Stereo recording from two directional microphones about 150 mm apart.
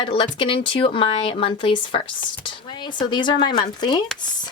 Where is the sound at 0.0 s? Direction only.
35° left (ahead or behind).